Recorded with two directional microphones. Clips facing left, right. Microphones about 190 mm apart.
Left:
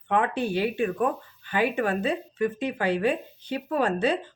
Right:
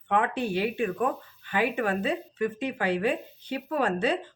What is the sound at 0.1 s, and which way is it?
Speech, 35° left (ahead or behind).